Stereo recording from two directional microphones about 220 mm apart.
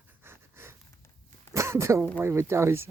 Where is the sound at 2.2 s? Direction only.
10° right (ahead or behind).